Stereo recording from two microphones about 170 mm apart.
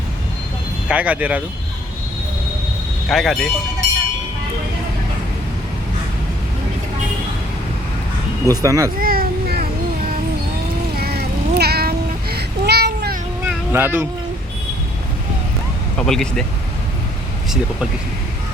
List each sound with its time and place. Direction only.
0.9 s speech: 10° right (ahead or behind)
3.1 s speech: centre (ahead or behind)
8.4 s speech: 20° right (ahead or behind)
9.0 s children playing: 60° right (ahead or behind)
10.9 s a sound: 65° right (ahead or behind)
13.4 s a sound: 10° right (ahead or behind)
16.0 s speech: 5° left (ahead or behind)